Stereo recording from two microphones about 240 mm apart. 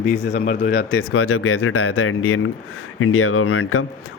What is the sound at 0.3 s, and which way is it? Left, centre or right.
Speech, left.